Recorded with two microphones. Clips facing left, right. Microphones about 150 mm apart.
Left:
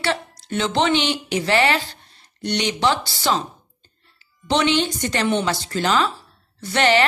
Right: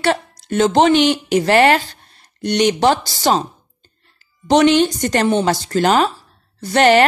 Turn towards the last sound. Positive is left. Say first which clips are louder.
# right 6 dB
turn(degrees=-45)  # may be behind; listen again after turning